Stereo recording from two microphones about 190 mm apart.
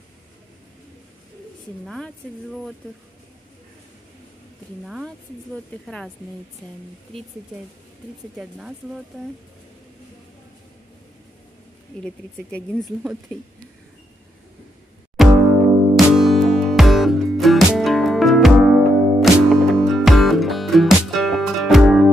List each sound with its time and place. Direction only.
1.9 s speech: 5° left (ahead or behind)
4.8 s speech: centre (ahead or behind)
8.4 s speech: 5° right (ahead or behind)
12.0 s speech: 5° left (ahead or behind)
15.2 s music: centre (ahead or behind)